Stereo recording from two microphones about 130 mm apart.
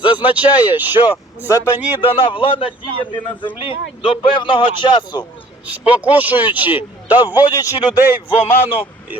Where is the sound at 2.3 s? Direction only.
40° left (ahead or behind).